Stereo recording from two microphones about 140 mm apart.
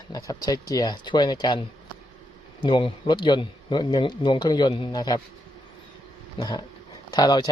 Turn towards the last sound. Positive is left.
turn(degrees=30)  # may be behind; listen again after turning